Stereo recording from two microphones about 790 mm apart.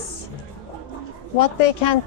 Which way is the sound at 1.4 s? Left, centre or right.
Left.